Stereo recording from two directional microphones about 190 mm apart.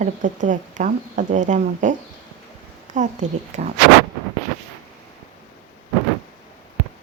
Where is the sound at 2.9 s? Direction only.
40° right (ahead or behind).